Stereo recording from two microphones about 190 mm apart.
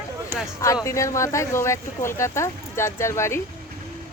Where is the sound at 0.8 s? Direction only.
15° left (ahead or behind).